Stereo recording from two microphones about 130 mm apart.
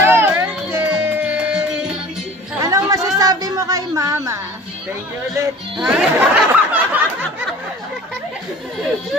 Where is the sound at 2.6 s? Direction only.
25° right (ahead or behind).